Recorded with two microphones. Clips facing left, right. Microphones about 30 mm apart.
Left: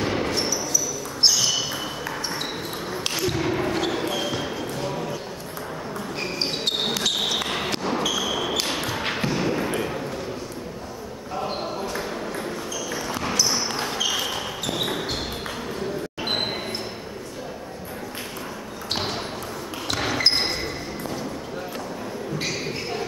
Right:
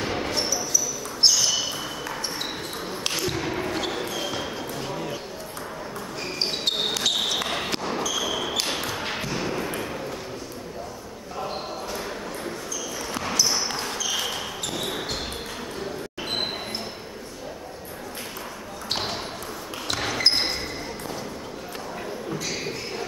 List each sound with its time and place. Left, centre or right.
0.0 s basketball bounce: centre
6.2 s basketball bounce: centre
8.1 s ping: centre
13.1 s basketball bounce: centre
19.9 s basketball bounce: centre